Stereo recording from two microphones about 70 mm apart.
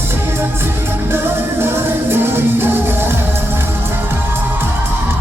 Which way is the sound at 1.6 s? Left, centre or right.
Right.